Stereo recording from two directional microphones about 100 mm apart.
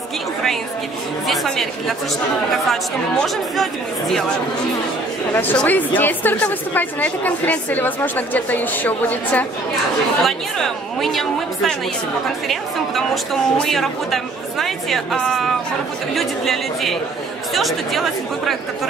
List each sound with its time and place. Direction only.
1.2 s speech: centre (ahead or behind)
5.3 s a woman's voice: 20° left (ahead or behind)
10.2 s speech: centre (ahead or behind)